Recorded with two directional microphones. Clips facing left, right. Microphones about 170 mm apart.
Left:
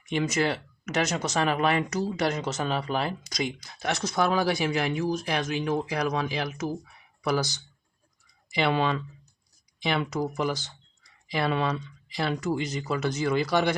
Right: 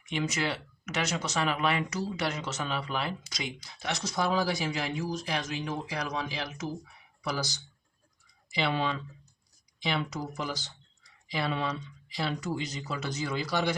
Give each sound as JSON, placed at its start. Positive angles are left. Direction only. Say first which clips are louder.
{"t": 0.1, "sound": "speech", "louder": "left 5 dB", "side_deg": 45}